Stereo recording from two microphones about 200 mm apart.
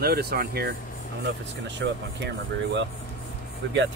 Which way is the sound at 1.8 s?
55° right (ahead or behind).